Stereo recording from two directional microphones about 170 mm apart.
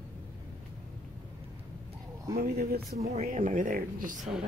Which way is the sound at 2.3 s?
60° right (ahead or behind).